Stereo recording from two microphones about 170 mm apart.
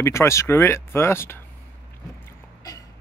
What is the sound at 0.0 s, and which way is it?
Speech, 15° left (ahead or behind).